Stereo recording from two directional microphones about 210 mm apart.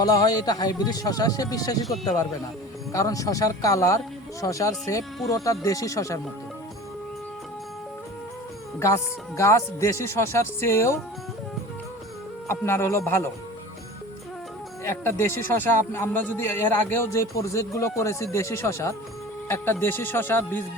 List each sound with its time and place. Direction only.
0.0 s a man's voice: 15° left (ahead or behind)
2.9 s a man's voice: 15° left (ahead or behind)
9.4 s a man's voice: 15° left (ahead or behind)
12.5 s a man's voice: 10° left (ahead or behind)
14.8 s a man's voice: 10° left (ahead or behind)